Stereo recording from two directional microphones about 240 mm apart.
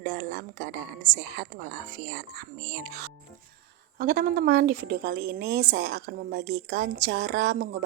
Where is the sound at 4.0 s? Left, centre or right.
Right.